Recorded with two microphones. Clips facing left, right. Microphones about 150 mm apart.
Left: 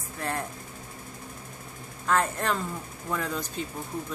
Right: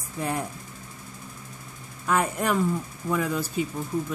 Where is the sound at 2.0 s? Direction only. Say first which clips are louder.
Right 2 dB; 10° right (ahead or behind).